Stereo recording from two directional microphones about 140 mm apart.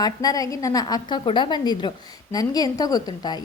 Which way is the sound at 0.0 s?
25° left (ahead or behind).